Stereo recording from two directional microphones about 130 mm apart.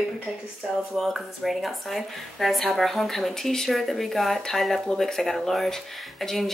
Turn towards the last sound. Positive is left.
turn(degrees=0)  # may be behind; listen again after turning